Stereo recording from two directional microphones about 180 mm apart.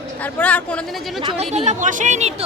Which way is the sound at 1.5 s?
40° right (ahead or behind).